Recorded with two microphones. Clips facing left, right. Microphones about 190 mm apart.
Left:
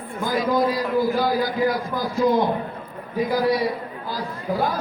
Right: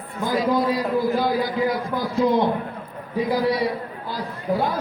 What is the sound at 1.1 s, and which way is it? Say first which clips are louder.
A man's voice: even; 25° right (ahead or behind).